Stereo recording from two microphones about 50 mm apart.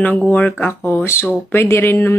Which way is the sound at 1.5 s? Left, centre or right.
Left.